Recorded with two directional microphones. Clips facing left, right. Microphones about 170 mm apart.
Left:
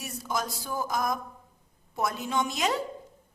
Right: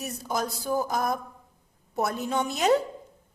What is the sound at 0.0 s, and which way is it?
A woman's voice, 35° right (ahead or behind).